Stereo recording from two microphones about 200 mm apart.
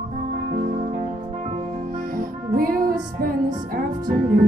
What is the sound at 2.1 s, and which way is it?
Music, 45° right (ahead or behind).